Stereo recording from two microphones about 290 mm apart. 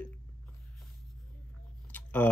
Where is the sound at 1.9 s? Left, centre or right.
Centre.